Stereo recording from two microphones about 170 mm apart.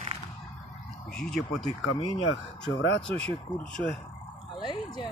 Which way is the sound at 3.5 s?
25° left (ahead or behind).